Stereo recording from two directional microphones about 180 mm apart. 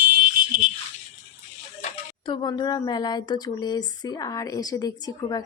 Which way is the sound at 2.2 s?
25° left (ahead or behind).